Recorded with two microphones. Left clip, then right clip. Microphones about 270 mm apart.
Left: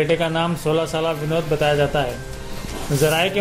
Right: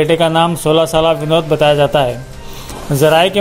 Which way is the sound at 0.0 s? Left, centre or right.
Right.